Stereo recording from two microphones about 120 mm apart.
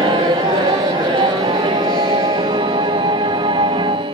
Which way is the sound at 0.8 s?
40° right (ahead or behind).